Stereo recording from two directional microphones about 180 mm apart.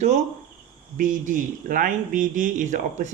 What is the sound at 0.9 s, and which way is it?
Speech, 45° right (ahead or behind).